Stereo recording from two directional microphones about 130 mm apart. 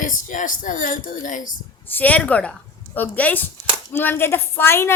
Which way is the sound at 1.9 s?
10° left (ahead or behind).